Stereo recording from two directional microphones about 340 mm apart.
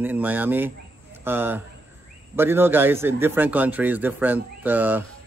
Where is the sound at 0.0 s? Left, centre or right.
Centre.